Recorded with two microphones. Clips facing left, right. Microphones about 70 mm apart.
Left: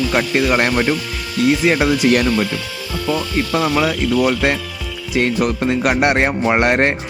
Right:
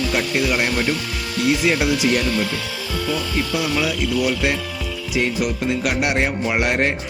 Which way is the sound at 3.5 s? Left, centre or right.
Left.